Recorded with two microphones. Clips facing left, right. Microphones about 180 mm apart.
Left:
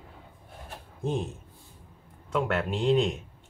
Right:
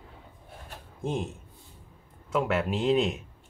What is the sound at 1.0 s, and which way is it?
Speech, centre (ahead or behind).